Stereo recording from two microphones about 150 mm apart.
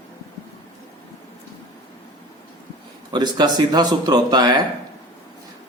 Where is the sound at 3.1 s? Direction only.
30° right (ahead or behind).